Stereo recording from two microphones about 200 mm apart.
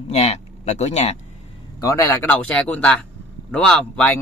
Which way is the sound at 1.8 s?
15° left (ahead or behind).